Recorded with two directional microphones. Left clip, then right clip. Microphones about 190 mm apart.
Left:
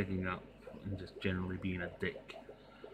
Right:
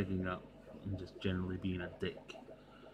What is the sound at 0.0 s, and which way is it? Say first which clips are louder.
Speech: left 1 dB; 5° right (ahead or behind).